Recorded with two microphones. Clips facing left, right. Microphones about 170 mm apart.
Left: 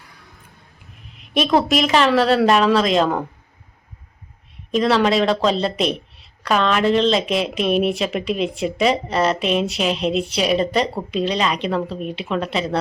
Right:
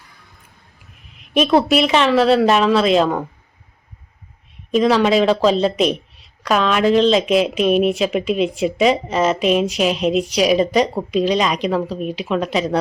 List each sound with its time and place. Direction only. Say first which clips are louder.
1.4 s speech: right 3 dB; 10° right (ahead or behind)
4.7 s speech: right 2 dB; 5° right (ahead or behind)
10.0 s speech: right 3 dB; 30° left (ahead or behind)
10.4 s speech: right 4 dB; 5° right (ahead or behind)